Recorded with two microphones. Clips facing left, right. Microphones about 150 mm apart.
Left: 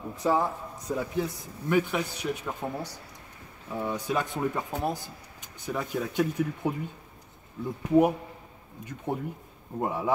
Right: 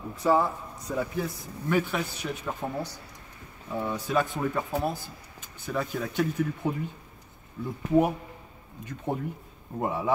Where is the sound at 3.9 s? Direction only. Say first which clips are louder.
Right 2 dB; 15° left (ahead or behind).